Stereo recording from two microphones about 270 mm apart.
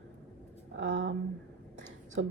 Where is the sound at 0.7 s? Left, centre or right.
Right.